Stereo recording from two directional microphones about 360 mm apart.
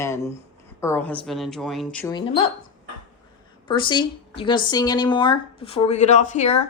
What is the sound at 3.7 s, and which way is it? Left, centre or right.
Speech, centre.